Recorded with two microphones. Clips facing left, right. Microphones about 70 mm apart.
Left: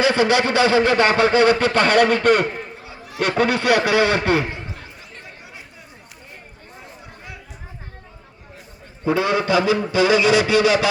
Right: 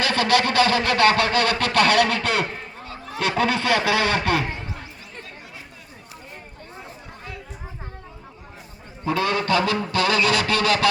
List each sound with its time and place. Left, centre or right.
0.0 s a man's voice: centre
1.7 s a man's voice: centre
2.5 s speech: centre
9.0 s a man's voice: centre